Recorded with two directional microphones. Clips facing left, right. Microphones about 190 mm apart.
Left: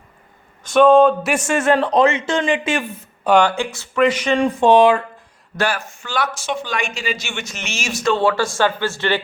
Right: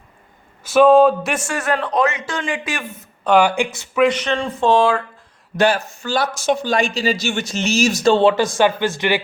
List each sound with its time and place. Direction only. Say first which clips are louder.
0.6 s a sound: even; 5° right (ahead or behind)
1.5 s a man's voice: left 7 dB; 25° left (ahead or behind)
3.4 s speech: right 1 dB; 15° right (ahead or behind)
4.1 s speech: left 4 dB; 10° left (ahead or behind)
5.5 s a man's voice: right 5 dB; 20° right (ahead or behind)
6.0 s speech: right 3 dB; 35° right (ahead or behind); by 9.2 s 15° right (ahead or behind)